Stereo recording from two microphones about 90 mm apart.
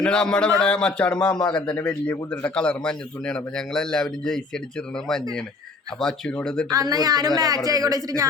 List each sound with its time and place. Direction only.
0.0 s a man's voice: 10° left (ahead or behind)
1.4 s a man's voice: 55° left (ahead or behind)
1.6 s a man's voice: 15° left (ahead or behind)
6.0 s a man's voice: 5° left (ahead or behind)
6.7 s speech: 45° right (ahead or behind)